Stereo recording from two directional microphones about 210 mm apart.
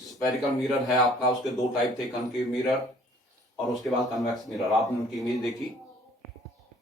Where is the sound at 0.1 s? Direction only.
Centre (ahead or behind).